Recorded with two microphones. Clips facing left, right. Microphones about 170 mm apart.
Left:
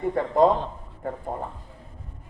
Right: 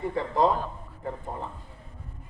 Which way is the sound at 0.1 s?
50° left (ahead or behind).